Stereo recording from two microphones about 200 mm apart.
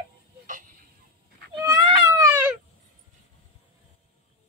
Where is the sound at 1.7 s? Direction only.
20° right (ahead or behind).